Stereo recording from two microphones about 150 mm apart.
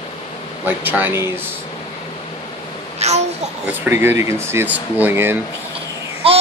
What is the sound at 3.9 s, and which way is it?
Speech, 15° right (ahead or behind).